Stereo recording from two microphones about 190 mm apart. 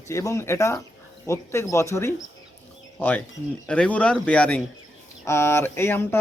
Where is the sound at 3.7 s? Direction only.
5° left (ahead or behind).